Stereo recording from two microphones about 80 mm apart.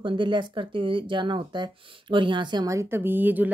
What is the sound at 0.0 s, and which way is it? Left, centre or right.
Speech, right.